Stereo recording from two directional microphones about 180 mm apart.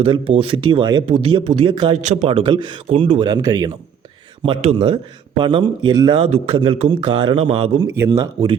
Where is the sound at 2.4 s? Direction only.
25° right (ahead or behind).